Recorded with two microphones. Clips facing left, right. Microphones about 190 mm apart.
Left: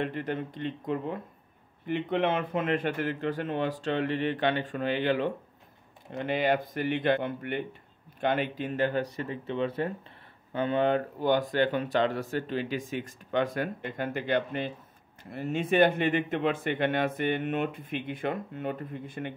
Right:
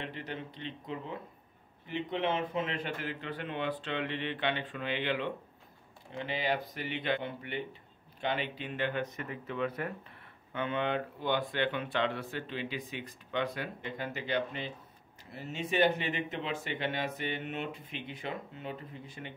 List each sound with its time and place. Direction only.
0.0 s speech: 50° left (ahead or behind)
6.1 s speech: 55° left (ahead or behind)